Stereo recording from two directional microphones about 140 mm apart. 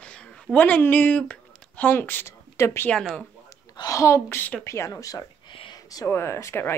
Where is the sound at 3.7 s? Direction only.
25° left (ahead or behind).